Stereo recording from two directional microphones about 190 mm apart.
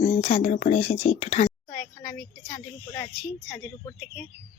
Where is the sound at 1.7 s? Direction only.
10° left (ahead or behind).